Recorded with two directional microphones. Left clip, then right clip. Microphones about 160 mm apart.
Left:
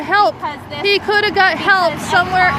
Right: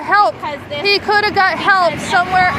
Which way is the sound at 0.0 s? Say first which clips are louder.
Right 1 dB; 35° left (ahead or behind).